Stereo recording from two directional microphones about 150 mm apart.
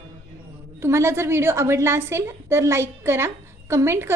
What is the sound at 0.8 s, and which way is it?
A woman's voice, 15° right (ahead or behind).